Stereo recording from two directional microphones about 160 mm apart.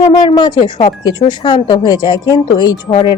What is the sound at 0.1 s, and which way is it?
Speech, 30° left (ahead or behind).